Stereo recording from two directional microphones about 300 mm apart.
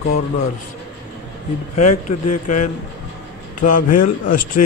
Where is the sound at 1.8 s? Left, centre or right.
Left.